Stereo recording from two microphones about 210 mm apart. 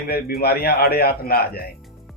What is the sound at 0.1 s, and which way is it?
Speech, 45° left (ahead or behind).